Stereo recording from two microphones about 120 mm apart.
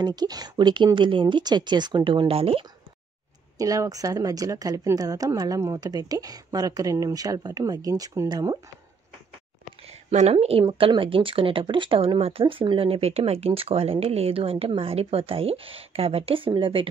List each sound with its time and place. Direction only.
0.0 s a woman's voice: 35° right (ahead or behind)
3.5 s a woman's voice: 30° right (ahead or behind)
9.8 s speech: 60° right (ahead or behind)
10.6 s speech: 40° right (ahead or behind)